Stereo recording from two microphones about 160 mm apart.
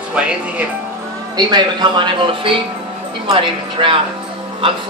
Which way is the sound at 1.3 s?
25° right (ahead or behind).